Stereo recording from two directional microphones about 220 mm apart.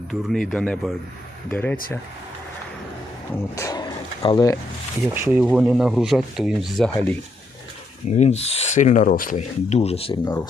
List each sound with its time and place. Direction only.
0.1 s speech: centre (ahead or behind)
3.5 s speech: 15° left (ahead or behind)
5.0 s speech: 10° right (ahead or behind)
8.0 s speech: 30° left (ahead or behind)